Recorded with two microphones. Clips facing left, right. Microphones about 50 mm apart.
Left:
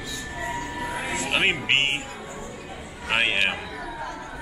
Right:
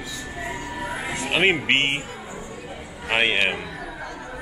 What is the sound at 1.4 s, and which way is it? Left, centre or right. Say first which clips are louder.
Music: right 7 dB; centre.